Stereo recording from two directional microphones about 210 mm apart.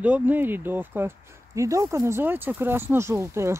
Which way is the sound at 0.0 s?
5° right (ahead or behind).